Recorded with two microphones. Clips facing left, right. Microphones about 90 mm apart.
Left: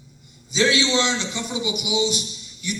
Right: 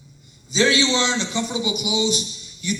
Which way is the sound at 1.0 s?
20° right (ahead or behind).